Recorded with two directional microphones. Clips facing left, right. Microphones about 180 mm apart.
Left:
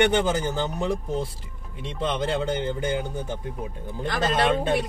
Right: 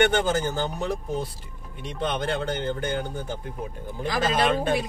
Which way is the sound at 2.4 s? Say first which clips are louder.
Left 2 dB; 10° left (ahead or behind).